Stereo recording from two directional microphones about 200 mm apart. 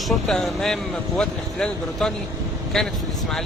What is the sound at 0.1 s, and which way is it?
Speech, centre (ahead or behind).